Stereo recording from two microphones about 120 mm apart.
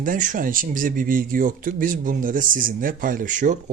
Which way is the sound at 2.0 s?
90° right.